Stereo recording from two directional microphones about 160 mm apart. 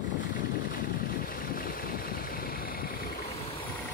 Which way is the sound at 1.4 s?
60° left (ahead or behind).